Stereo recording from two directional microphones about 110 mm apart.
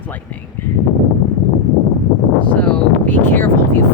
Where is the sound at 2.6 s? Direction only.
15° left (ahead or behind).